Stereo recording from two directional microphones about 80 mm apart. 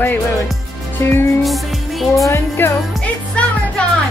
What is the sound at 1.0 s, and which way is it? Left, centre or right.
Speech, left.